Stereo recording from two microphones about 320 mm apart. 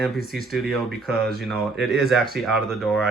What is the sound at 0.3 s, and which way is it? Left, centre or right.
Speech, centre.